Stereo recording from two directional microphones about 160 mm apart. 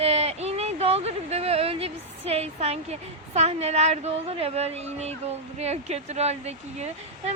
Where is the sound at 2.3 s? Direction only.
40° right (ahead or behind).